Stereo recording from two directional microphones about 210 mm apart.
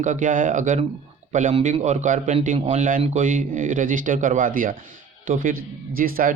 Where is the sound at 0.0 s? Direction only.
40° right (ahead or behind).